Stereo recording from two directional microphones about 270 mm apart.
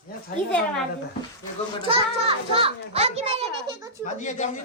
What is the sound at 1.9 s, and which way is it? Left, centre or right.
A child's voice, right.